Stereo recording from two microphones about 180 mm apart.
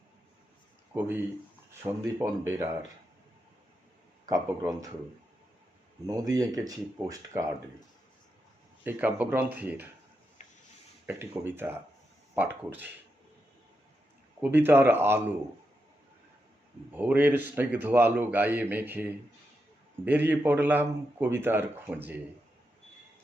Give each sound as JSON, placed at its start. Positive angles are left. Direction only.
{"t": 0.9, "sound": "a man's voice", "side_deg": -10}
{"t": 4.3, "sound": "speech", "side_deg": -15}
{"t": 6.1, "sound": "speech", "side_deg": -20}
{"t": 8.8, "sound": "a man's voice", "side_deg": -10}
{"t": 11.0, "sound": "a man's voice", "side_deg": -10}
{"t": 14.4, "sound": "a man's voice", "side_deg": -10}
{"t": 16.9, "sound": "a man's voice", "side_deg": -10}